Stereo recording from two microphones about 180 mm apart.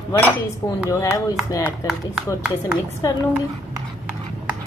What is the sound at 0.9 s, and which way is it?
Speech, 15° left (ahead or behind).